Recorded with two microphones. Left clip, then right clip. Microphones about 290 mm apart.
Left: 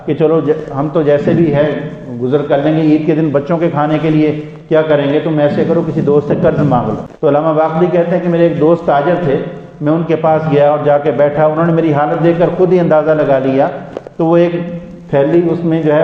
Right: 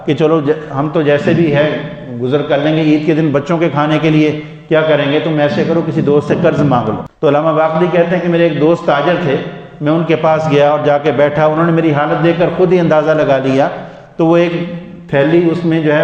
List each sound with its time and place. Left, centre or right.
0.1 s a man's voice: right